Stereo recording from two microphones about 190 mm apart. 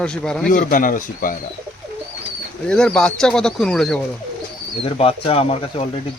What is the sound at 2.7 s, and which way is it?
Speech, 5° left (ahead or behind).